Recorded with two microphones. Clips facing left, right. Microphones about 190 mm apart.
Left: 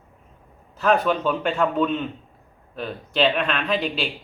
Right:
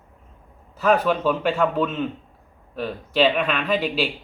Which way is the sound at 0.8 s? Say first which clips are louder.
Right 1 dB; 5° right (ahead or behind).